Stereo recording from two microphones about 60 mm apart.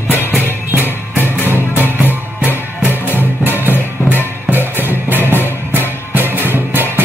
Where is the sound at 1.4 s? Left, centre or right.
Left.